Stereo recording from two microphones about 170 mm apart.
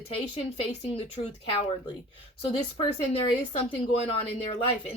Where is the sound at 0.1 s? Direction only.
35° left (ahead or behind).